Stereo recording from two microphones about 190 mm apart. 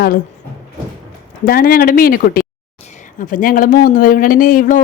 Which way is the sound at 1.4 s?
50° left (ahead or behind).